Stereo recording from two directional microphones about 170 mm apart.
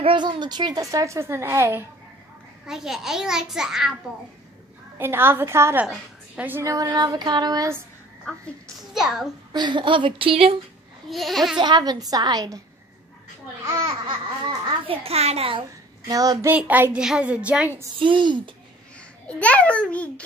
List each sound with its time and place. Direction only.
0.0 s a woman's voice: 25° right (ahead or behind)
2.6 s a child's voice: 5° right (ahead or behind)
4.9 s a child's voice: 15° right (ahead or behind)
8.9 s a child's voice: 5° right (ahead or behind)
9.5 s a woman's voice: 25° right (ahead or behind)
11.1 s a child's voice: centre (ahead or behind)
11.5 s a woman's voice: 25° right (ahead or behind)
13.7 s speech: 20° right (ahead or behind)
16.1 s a child's voice: 20° right (ahead or behind)
17.9 s a woman's voice: 30° right (ahead or behind)
19.2 s a child's voice: 5° left (ahead or behind)